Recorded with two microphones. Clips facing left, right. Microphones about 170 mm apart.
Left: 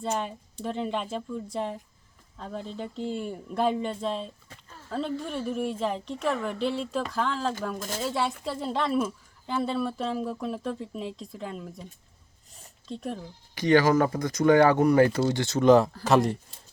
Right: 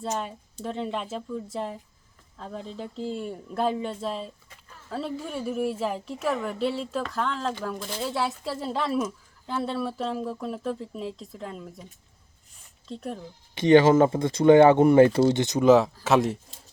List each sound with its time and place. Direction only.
0.6 s speech: centre (ahead or behind)
12.9 s speech: centre (ahead or behind)
13.6 s speech: 25° right (ahead or behind)
15.6 s speech: centre (ahead or behind)